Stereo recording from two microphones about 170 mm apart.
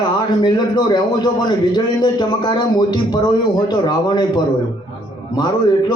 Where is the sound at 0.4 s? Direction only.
25° left (ahead or behind).